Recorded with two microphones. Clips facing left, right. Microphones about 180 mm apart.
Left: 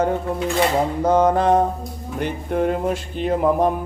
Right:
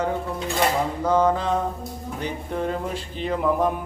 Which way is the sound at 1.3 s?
55° left (ahead or behind).